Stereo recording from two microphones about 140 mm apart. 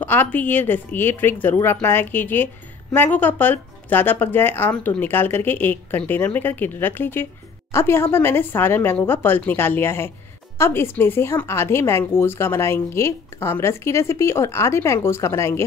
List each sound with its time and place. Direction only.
0.0 s a woman's voice: 15° left (ahead or behind)